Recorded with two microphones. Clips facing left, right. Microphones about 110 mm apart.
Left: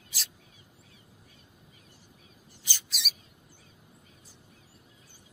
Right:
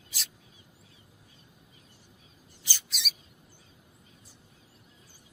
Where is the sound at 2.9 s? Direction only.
Centre (ahead or behind).